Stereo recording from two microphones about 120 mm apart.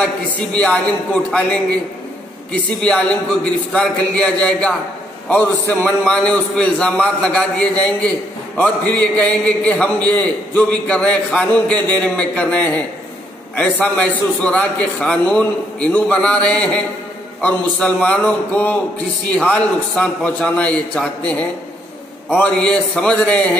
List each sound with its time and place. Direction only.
0.0 s a man's voice: 10° left (ahead or behind)
22.4 s a man's voice: 10° left (ahead or behind)